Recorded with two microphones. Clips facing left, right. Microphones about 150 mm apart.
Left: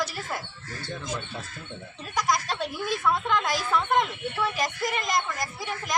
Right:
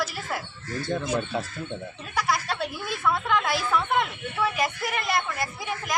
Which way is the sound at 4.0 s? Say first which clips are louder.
Even; 10° right (ahead or behind).